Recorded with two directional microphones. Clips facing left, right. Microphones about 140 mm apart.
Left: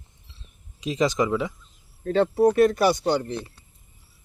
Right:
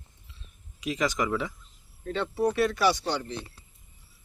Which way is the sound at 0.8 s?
25° left (ahead or behind).